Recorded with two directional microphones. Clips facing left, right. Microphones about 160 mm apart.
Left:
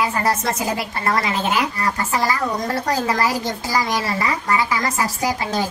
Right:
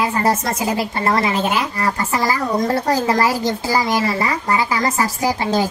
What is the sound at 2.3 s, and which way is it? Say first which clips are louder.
A woman's voice: right 4 dB; 30° right (ahead or behind).